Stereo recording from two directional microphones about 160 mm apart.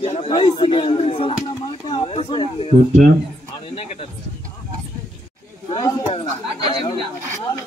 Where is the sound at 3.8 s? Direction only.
40° left (ahead or behind).